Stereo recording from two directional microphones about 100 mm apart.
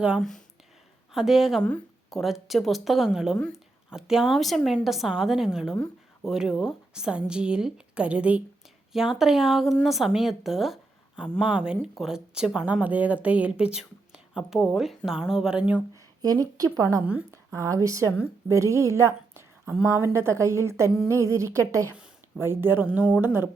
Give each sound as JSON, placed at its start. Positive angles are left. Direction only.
{"t": 0.2, "sound": "a woman's voice", "side_deg": 5}
{"t": 16.2, "sound": "speech", "side_deg": -40}
{"t": 17.3, "sound": "a sound", "side_deg": -30}
{"t": 17.8, "sound": "a woman's voice", "side_deg": -30}